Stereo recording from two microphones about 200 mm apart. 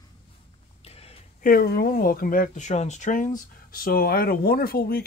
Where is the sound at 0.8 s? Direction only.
30° left (ahead or behind).